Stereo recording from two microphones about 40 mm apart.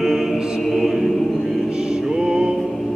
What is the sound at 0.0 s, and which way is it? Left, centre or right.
Music, centre.